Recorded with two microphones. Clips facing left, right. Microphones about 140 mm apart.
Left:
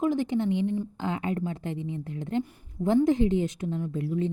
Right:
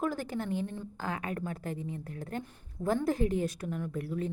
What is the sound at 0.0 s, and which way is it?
Speech, 20° left (ahead or behind).